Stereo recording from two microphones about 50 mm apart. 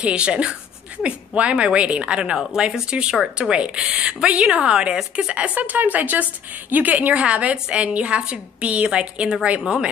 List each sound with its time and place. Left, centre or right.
0.0 s a woman's voice: right
5.6 s a woman's voice: right